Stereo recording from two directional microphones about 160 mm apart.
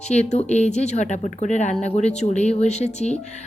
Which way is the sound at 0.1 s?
45° left (ahead or behind).